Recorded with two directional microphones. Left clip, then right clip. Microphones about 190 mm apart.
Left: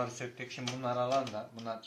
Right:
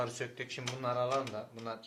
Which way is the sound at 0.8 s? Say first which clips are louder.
Even; 35° right (ahead or behind).